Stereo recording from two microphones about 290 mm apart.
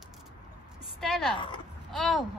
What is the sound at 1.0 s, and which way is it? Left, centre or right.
A child's voice, centre.